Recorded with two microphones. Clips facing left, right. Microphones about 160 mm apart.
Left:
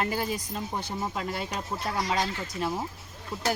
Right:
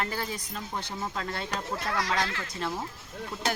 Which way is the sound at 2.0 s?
15° left (ahead or behind).